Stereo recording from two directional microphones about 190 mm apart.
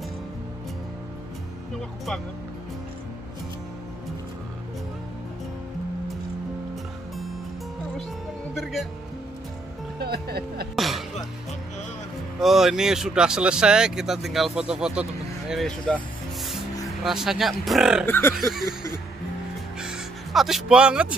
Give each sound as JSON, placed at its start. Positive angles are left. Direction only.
{"t": 9.9, "sound": "music", "side_deg": -55}
{"t": 10.8, "sound": "music", "side_deg": 0}
{"t": 12.4, "sound": "speech", "side_deg": 0}
{"t": 17.0, "sound": "speech", "side_deg": 0}
{"t": 18.0, "sound": "fowl", "side_deg": 10}
{"t": 18.3, "sound": "speech", "side_deg": 0}
{"t": 18.7, "sound": "speech", "side_deg": -20}
{"t": 19.8, "sound": "music", "side_deg": -5}